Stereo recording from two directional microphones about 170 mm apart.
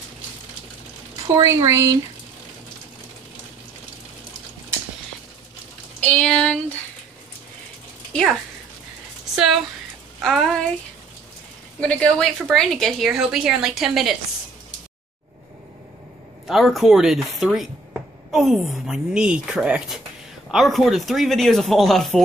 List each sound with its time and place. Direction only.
1.3 s speech: 15° right (ahead or behind)
5.9 s speech: 5° left (ahead or behind)
8.1 s speech: centre (ahead or behind)
10.2 s speech: centre (ahead or behind)
11.8 s speech: 5° left (ahead or behind)
16.4 s speech: centre (ahead or behind)